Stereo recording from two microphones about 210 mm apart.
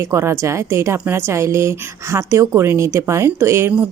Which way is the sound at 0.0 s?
15° right (ahead or behind).